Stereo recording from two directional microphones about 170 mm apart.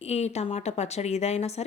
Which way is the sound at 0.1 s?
40° left (ahead or behind).